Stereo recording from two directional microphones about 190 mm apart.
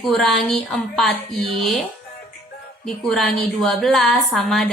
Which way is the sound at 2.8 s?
Centre (ahead or behind).